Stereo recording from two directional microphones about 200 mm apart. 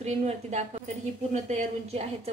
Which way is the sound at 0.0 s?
35° right (ahead or behind).